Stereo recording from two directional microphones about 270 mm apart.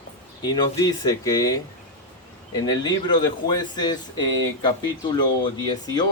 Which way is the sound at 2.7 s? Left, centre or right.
Centre.